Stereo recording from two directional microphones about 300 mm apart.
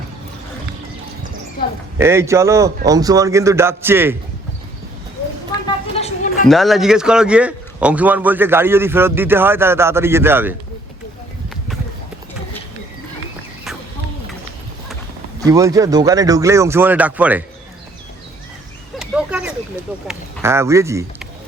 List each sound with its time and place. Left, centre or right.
2.0 s a man's voice: centre
5.6 s a sound: left
6.5 s a man's voice: centre
15.4 s a man's voice: centre
18.9 s a sound: centre
20.1 s a man's voice: centre